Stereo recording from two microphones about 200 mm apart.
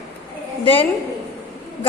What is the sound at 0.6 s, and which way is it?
Speech, 25° left (ahead or behind).